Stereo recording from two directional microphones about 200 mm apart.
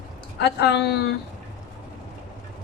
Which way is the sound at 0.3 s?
55° left (ahead or behind).